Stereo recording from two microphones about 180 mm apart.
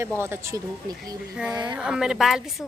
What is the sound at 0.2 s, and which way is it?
Speech, 15° right (ahead or behind).